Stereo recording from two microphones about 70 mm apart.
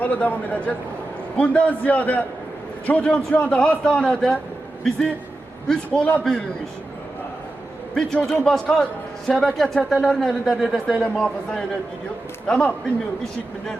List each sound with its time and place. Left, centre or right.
0.0 s a man's voice: left
8.3 s a man's voice: centre